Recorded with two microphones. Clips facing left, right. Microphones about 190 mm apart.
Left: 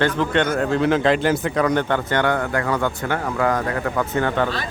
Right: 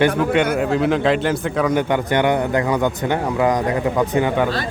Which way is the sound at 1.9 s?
15° right (ahead or behind).